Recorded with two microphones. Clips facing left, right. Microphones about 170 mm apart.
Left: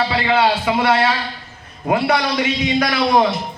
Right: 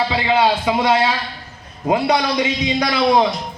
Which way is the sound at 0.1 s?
20° right (ahead or behind).